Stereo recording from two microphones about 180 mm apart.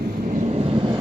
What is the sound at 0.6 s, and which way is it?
Vehicle, 30° right (ahead or behind).